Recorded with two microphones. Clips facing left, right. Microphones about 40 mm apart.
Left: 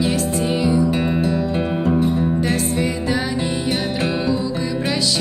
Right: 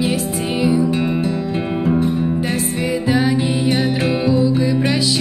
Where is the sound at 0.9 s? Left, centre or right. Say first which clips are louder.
Even; centre.